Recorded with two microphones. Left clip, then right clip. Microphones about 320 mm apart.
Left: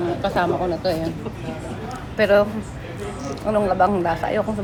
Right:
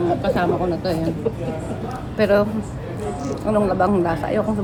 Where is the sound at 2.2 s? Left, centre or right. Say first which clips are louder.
Left 1 dB; centre.